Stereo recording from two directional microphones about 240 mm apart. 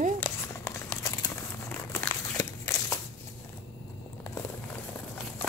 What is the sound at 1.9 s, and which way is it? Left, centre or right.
Walk, centre.